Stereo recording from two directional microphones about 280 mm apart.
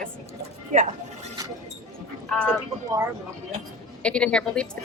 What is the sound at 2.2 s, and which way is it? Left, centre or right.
Speech, centre.